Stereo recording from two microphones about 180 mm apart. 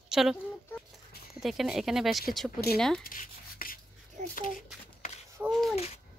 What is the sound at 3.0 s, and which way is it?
Rub, 50° left (ahead or behind).